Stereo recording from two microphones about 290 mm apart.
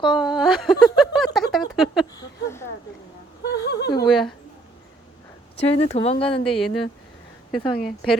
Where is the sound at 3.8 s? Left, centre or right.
Centre.